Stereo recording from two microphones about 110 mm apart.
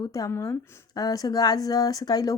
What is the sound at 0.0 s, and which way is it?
Speech, 35° left (ahead or behind).